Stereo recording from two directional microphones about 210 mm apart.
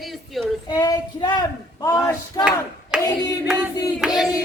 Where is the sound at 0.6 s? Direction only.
20° left (ahead or behind).